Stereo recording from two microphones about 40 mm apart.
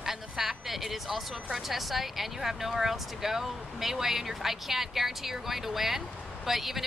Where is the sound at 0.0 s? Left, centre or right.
Centre.